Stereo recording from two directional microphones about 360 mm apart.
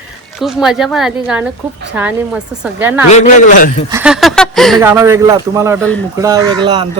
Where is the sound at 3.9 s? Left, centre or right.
Centre.